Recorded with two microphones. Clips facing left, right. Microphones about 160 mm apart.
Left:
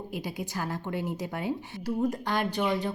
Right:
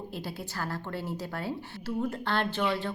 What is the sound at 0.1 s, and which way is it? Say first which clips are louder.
A woman's voice: left 3 dB; 15° left (ahead or behind).